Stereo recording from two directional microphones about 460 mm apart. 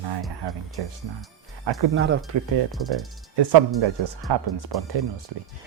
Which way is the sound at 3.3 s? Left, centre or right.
Right.